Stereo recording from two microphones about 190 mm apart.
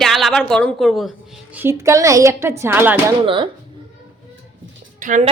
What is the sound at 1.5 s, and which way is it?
Speech, 10° right (ahead or behind).